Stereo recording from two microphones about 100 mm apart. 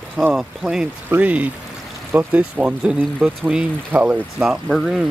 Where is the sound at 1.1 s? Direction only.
15° right (ahead or behind).